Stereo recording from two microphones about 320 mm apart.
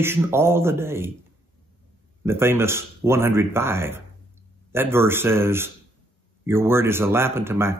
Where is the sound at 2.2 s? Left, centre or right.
Centre.